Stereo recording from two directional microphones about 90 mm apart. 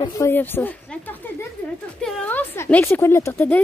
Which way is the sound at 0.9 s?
20° left (ahead or behind).